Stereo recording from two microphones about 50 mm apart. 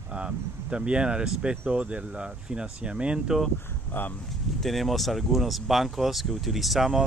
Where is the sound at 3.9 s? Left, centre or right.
Left.